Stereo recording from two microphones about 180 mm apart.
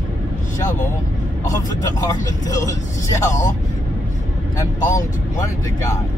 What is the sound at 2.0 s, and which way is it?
Speech, 20° left (ahead or behind).